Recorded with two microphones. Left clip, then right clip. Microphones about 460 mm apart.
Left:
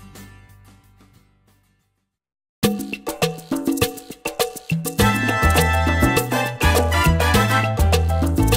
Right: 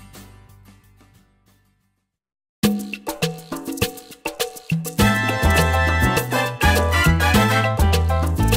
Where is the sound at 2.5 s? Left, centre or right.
Left.